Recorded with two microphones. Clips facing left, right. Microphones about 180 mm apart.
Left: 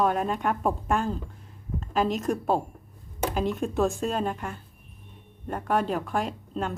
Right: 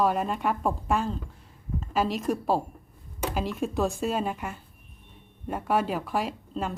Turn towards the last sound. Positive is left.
turn(degrees=-5)  # may be behind; listen again after turning